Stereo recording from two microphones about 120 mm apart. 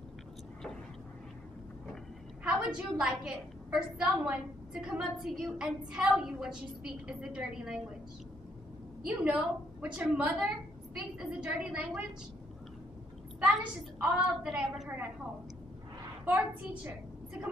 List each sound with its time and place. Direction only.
2.4 s a woman's voice: 10° right (ahead or behind)
9.0 s a woman's voice: 10° right (ahead or behind)
13.9 s a woman's voice: 10° right (ahead or behind)
16.3 s a woman's voice: 20° right (ahead or behind)